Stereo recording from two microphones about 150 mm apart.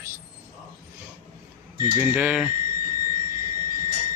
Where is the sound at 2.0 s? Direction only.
10° right (ahead or behind).